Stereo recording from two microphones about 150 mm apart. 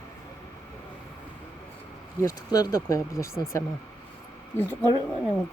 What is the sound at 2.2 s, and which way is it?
Speech, 25° left (ahead or behind).